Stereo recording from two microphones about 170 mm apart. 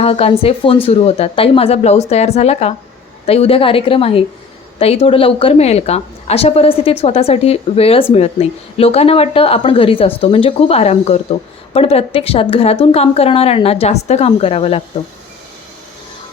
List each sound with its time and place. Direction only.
0.0 s a woman's voice: 35° left (ahead or behind)